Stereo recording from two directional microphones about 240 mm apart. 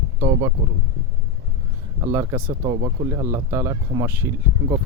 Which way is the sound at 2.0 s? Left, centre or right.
Centre.